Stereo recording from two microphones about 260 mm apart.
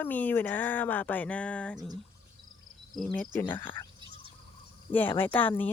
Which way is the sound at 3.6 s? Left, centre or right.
Centre.